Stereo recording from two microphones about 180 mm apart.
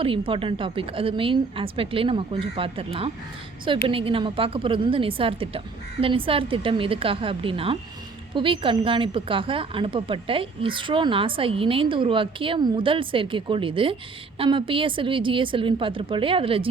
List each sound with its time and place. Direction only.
0.0 s a woman's voice: 30° right (ahead or behind)